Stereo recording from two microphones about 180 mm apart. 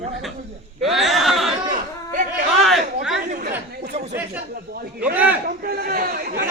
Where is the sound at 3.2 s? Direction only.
50° right (ahead or behind).